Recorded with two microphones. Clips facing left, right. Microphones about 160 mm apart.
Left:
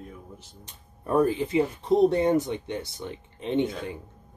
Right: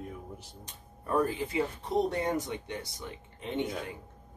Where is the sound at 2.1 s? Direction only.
25° left (ahead or behind).